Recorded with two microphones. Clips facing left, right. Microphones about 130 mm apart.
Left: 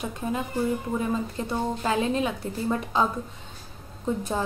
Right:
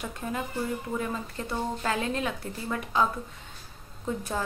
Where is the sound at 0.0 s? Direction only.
20° left (ahead or behind).